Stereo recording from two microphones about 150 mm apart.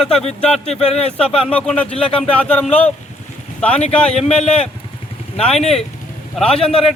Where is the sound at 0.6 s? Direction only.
45° left (ahead or behind).